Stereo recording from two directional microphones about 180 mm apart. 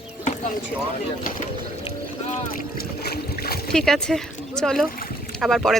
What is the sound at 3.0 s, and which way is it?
Boat, 60° left (ahead or behind).